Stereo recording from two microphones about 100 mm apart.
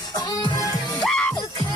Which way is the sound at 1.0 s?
10° left (ahead or behind).